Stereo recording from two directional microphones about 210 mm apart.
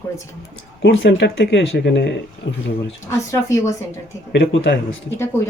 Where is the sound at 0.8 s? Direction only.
55° left (ahead or behind).